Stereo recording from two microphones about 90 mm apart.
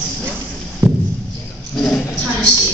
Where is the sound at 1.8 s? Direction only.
10° left (ahead or behind).